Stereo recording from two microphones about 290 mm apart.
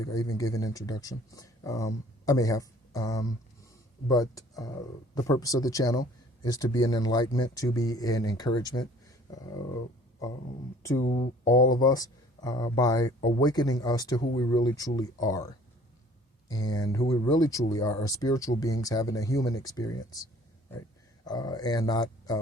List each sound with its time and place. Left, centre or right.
0.0 s speech: centre
11.0 s speech: left
11.8 s speech: centre
21.2 s speech: centre